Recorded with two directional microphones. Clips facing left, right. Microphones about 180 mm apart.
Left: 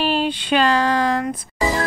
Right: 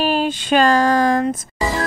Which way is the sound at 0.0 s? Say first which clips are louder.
Right 2 dB; 45° right (ahead or behind).